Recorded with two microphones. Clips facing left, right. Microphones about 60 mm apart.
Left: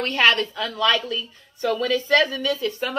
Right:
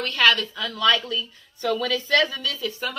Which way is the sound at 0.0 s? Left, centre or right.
Left.